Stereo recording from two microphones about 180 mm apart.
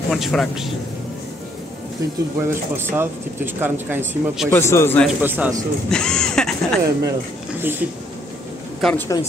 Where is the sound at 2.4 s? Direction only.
15° right (ahead or behind).